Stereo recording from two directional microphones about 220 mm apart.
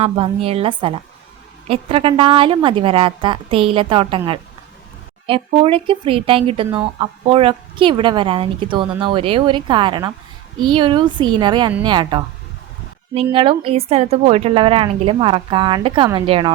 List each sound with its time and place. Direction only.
0.0 s a woman's voice: 25° right (ahead or behind)
5.2 s a woman's voice: 25° right (ahead or behind)
13.3 s a woman's voice: 25° right (ahead or behind)